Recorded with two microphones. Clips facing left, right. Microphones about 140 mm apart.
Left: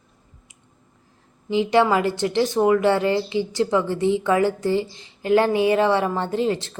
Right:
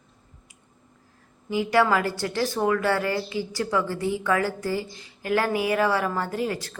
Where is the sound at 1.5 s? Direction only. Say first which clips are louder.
Left 3 dB; 20° left (ahead or behind).